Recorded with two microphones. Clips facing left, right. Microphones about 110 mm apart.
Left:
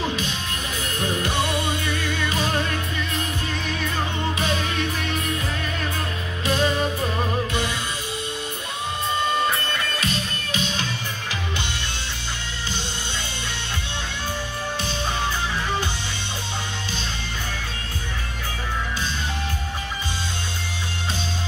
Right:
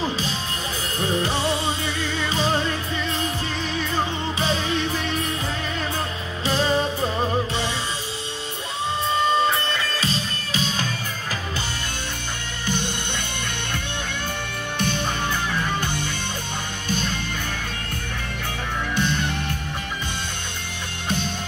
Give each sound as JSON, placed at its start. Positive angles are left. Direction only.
{"t": 0.9, "sound": "music", "side_deg": -30}
{"t": 4.4, "sound": "music", "side_deg": -30}
{"t": 6.4, "sound": "music", "side_deg": -30}
{"t": 9.9, "sound": "music", "side_deg": -30}
{"t": 18.9, "sound": "music", "side_deg": -60}